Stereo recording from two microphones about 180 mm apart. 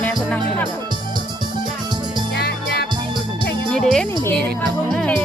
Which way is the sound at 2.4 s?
65° left (ahead or behind).